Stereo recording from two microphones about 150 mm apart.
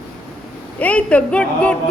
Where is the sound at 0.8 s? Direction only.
10° left (ahead or behind).